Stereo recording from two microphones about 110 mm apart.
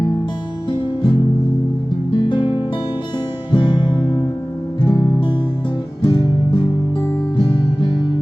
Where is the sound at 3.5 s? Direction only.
50° left (ahead or behind).